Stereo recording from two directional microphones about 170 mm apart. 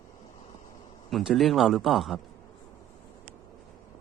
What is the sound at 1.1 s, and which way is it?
Speech, centre (ahead or behind).